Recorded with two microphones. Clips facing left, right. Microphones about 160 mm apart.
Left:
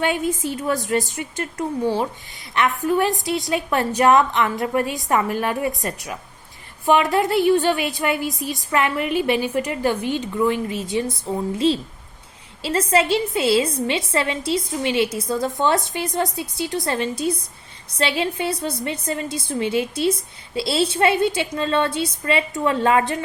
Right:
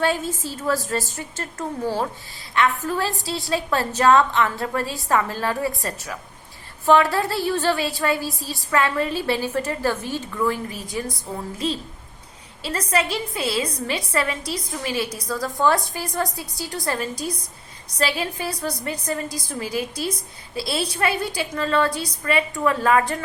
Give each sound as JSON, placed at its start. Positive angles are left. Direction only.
{"t": 0.0, "sound": "a woman's voice", "side_deg": 20}